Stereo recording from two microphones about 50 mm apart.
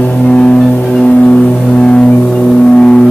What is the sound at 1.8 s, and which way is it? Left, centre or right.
Music, centre.